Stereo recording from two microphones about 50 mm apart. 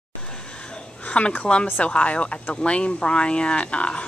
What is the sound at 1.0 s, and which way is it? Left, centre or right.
Speech, left.